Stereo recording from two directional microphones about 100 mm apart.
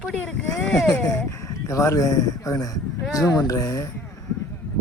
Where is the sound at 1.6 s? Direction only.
30° left (ahead or behind).